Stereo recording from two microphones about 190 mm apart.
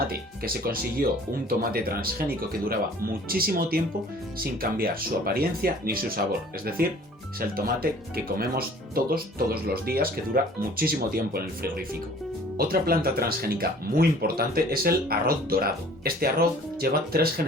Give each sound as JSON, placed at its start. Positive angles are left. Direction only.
{"t": 0.1, "sound": "speech", "side_deg": -50}